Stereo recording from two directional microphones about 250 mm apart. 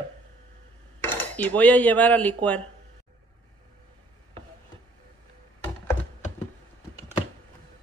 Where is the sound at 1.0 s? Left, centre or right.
Centre.